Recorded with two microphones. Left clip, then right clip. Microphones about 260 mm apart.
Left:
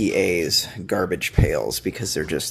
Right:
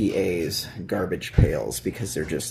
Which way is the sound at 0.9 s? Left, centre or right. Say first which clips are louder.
Left 1 dB; left.